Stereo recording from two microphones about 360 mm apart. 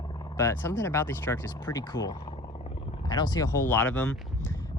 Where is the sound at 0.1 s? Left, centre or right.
Centre.